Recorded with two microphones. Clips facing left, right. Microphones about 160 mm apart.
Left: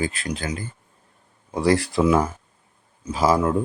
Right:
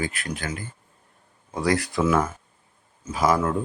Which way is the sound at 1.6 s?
30° left (ahead or behind).